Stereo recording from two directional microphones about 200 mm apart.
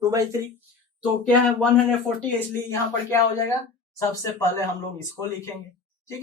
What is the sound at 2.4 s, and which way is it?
Speech, 10° left (ahead or behind).